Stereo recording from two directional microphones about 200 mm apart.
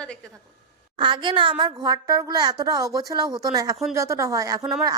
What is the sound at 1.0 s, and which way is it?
A woman's voice, 25° right (ahead or behind).